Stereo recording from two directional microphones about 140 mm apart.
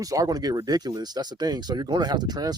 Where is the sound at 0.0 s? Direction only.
25° right (ahead or behind).